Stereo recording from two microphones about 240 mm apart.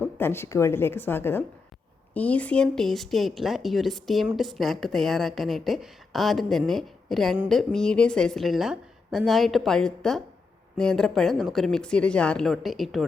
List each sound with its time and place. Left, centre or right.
0.0 s a woman's voice: centre